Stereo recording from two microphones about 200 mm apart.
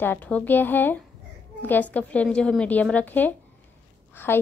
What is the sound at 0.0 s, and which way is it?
A woman's voice, 10° left (ahead or behind).